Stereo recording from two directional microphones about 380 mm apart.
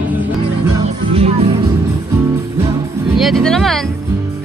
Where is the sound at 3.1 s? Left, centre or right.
Centre.